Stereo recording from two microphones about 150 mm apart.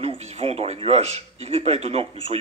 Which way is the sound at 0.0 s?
40° right (ahead or behind).